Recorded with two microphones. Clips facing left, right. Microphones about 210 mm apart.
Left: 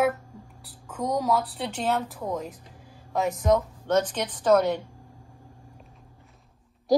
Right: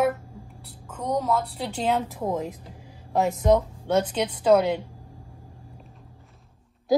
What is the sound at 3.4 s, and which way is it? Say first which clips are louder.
Speech: right 2 dB; 25° right (ahead or behind).